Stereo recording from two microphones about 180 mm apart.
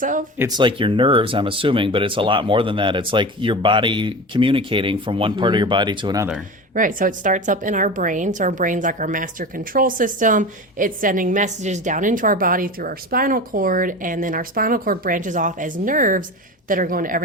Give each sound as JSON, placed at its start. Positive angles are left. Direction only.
{"t": 0.0, "sound": "a woman's voice", "side_deg": -45}
{"t": 0.3, "sound": "speech", "side_deg": -20}
{"t": 6.7, "sound": "a woman's voice", "side_deg": -50}